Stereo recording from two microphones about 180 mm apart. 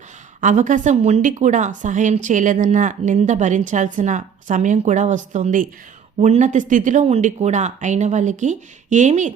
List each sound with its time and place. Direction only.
0.4 s a woman's voice: 45° right (ahead or behind)